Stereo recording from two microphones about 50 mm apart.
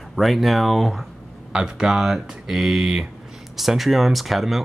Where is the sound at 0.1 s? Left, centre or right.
Centre.